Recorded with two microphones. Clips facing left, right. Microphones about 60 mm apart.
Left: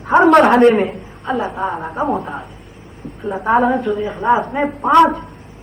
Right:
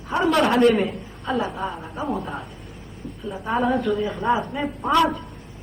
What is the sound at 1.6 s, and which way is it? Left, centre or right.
A woman's voice, left.